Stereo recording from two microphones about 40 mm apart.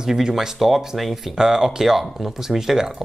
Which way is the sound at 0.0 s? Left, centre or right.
Centre.